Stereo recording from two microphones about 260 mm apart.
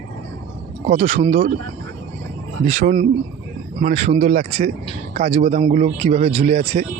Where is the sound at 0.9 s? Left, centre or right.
Right.